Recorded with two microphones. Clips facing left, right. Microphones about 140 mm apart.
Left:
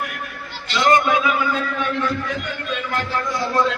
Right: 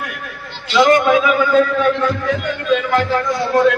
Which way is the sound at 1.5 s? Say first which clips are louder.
Right 9 dB; 90° right.